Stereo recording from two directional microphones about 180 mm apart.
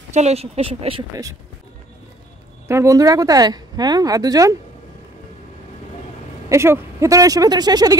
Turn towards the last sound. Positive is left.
turn(degrees=-20)  # may be behind; listen again after turning